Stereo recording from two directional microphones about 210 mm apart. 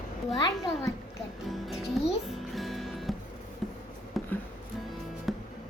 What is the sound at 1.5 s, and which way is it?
Speech, centre (ahead or behind).